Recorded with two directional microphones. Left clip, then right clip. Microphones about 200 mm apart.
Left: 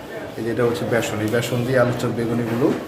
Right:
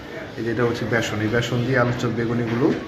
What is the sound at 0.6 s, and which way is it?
A man's voice, 5° left (ahead or behind).